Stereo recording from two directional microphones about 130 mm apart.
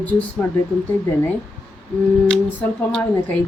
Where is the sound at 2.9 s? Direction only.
5° left (ahead or behind).